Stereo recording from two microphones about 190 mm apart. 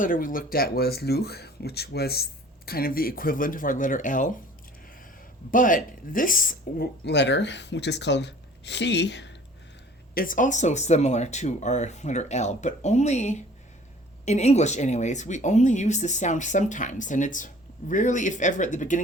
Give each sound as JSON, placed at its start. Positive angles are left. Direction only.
{"t": 0.0, "sound": "speech", "side_deg": 45}
{"t": 5.5, "sound": "speech", "side_deg": 45}
{"t": 7.0, "sound": "speech", "side_deg": 65}
{"t": 10.2, "sound": "speech", "side_deg": 45}